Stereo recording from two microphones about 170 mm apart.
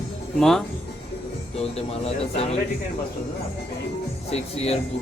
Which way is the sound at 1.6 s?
35° left (ahead or behind).